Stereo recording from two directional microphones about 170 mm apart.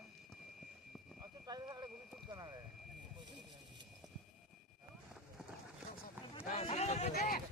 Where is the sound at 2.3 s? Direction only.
25° right (ahead or behind).